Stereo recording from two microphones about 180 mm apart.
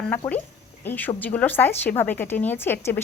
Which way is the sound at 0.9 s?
10° left (ahead or behind).